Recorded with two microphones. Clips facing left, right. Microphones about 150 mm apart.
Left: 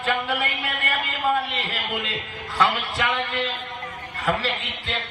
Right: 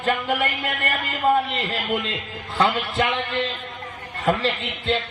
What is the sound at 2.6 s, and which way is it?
Music, 40° right (ahead or behind).